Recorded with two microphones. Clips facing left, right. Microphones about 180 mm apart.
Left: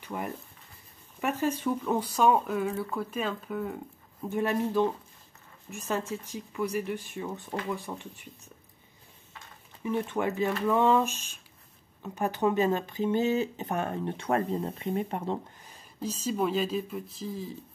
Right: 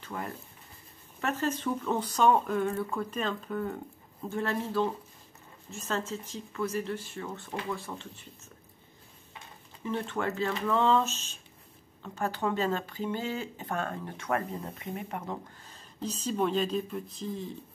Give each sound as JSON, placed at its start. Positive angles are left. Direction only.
{"t": 0.0, "sound": "speech", "side_deg": 15}
{"t": 4.3, "sound": "speech", "side_deg": 15}
{"t": 9.8, "sound": "speech", "side_deg": 15}
{"t": 15.6, "sound": "speech", "side_deg": 10}